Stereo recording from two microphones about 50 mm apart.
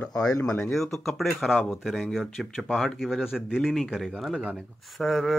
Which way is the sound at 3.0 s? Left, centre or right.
Centre.